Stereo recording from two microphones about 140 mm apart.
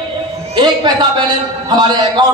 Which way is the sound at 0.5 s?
30° right (ahead or behind).